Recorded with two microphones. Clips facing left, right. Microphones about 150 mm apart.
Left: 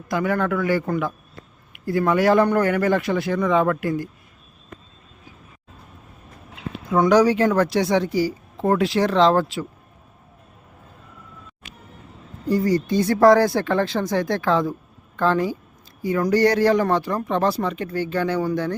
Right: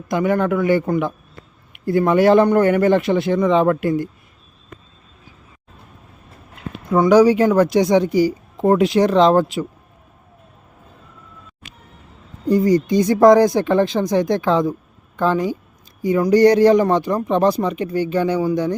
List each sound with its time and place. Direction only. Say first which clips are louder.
0.1 s speech: right 4 dB; 20° right (ahead or behind)
6.9 s speech: right 4 dB; 10° right (ahead or behind)
12.5 s speech: right 5 dB; 20° right (ahead or behind)